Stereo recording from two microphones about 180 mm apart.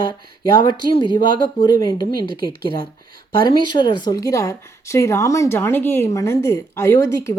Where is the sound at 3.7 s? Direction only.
25° left (ahead or behind).